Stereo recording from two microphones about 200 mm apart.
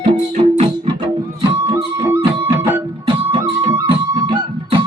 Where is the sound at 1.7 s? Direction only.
10° right (ahead or behind).